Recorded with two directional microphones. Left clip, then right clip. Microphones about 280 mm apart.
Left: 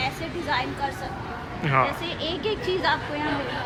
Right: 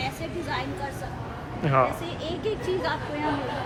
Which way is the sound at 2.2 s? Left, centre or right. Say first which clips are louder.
Left 2 dB; left.